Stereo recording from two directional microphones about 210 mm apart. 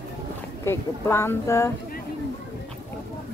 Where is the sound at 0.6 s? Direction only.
10° left (ahead or behind).